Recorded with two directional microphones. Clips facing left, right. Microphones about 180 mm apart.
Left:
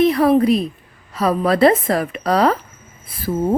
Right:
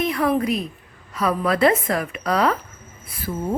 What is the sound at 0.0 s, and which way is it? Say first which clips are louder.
A woman's voice: left 7 dB; 30° left (ahead or behind).